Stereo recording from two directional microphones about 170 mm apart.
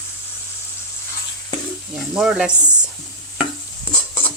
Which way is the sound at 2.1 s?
5° right (ahead or behind).